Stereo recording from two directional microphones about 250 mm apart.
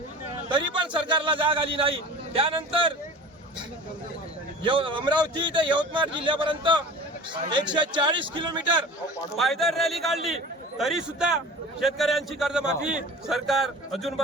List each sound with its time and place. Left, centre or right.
0.4 s a man's voice: centre
4.6 s speech: centre
9.4 s a man's voice: centre